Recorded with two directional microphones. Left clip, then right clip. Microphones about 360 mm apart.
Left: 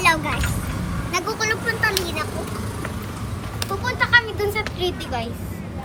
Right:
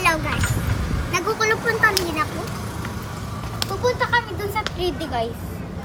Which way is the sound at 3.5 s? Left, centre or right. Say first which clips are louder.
Right 1 dB; centre.